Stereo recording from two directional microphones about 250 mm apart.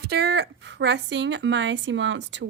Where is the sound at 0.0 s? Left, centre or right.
Right.